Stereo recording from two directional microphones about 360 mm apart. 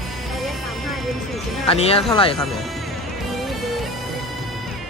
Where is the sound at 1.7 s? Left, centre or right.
Centre.